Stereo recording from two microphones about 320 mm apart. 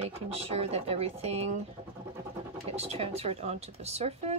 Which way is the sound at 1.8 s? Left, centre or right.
Centre.